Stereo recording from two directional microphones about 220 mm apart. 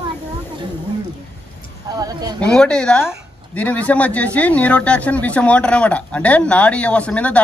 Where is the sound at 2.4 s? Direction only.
5° left (ahead or behind).